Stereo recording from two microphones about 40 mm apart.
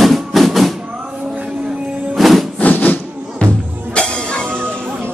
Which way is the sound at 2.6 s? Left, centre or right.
Left.